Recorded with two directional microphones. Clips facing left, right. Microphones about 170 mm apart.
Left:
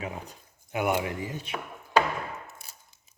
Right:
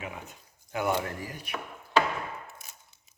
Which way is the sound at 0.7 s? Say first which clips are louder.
Left 2 dB; 20° left (ahead or behind).